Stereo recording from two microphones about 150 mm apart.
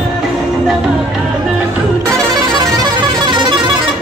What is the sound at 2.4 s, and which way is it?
Music, 25° right (ahead or behind).